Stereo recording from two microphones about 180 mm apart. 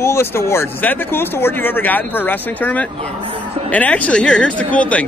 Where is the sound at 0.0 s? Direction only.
15° left (ahead or behind).